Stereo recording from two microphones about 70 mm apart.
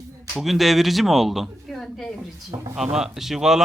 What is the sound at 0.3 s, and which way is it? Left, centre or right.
A man's voice, centre.